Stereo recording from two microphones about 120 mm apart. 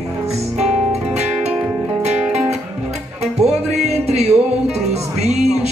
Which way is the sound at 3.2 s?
65° right (ahead or behind).